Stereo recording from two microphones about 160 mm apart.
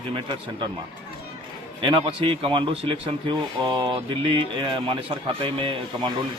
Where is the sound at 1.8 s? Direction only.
35° right (ahead or behind).